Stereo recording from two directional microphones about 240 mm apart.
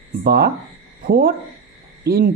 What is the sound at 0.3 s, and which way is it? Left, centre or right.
Speech, right.